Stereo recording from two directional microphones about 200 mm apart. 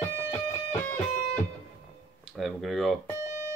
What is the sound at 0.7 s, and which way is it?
Music, 10° left (ahead or behind).